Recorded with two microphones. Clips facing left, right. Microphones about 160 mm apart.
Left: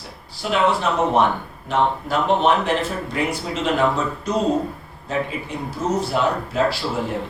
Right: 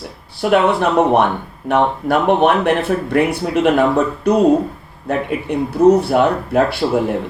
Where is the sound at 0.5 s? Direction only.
60° right (ahead or behind).